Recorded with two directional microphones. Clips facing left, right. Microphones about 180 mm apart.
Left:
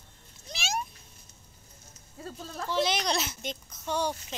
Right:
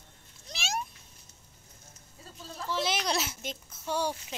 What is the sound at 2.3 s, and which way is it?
Speech, 60° left (ahead or behind).